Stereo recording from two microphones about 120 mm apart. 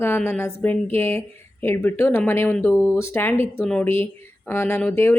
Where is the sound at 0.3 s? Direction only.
20° left (ahead or behind).